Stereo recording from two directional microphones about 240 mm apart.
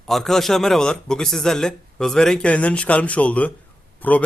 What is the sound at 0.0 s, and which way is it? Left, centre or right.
Speech, centre.